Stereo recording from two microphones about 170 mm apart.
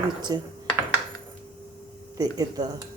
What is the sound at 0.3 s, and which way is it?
Speech, 25° right (ahead or behind).